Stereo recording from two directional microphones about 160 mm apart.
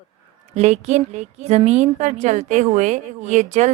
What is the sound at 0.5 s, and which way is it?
A woman's voice, 45° right (ahead or behind).